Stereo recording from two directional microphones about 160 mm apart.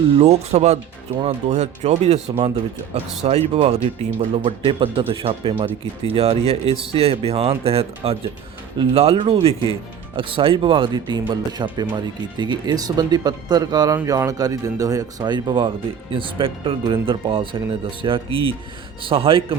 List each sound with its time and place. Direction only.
0.2 s speech: 45° right (ahead or behind)